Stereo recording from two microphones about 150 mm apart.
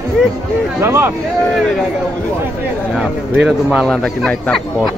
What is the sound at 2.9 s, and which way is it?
A man's voice, 5° right (ahead or behind).